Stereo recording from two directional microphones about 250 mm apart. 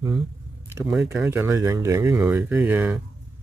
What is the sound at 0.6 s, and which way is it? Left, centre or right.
Speech, centre.